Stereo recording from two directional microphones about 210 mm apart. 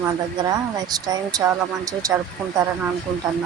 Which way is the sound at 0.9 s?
20° right (ahead or behind).